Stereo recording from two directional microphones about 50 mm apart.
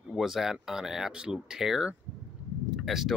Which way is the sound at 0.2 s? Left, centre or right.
Centre.